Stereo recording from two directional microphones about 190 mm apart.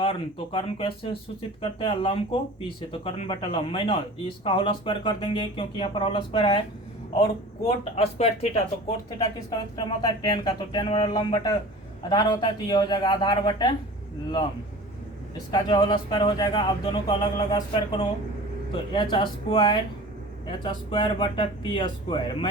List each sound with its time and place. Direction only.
0.0 s speech: 30° left (ahead or behind)
7.9 s speech: 30° left (ahead or behind)
9.1 s speech: 20° left (ahead or behind)
15.5 s speech: 25° left (ahead or behind)